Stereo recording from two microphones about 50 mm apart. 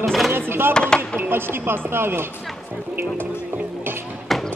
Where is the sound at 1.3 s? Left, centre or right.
Right.